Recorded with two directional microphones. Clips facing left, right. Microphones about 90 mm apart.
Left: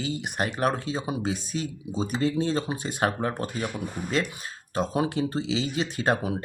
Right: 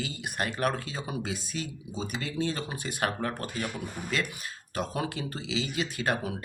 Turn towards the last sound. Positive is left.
turn(degrees=30)  # may be behind; listen again after turning